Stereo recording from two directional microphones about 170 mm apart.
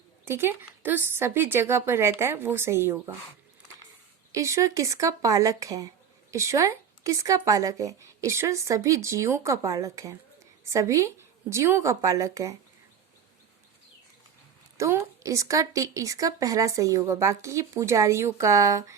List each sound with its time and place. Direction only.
0.3 s a woman's voice: 15° right (ahead or behind)
4.3 s a woman's voice: 20° right (ahead or behind)
14.8 s a woman's voice: 15° right (ahead or behind)